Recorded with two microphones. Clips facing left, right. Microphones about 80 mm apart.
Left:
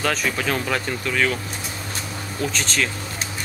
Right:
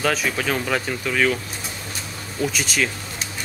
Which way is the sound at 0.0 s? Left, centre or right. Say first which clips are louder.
Right 1 dB; centre.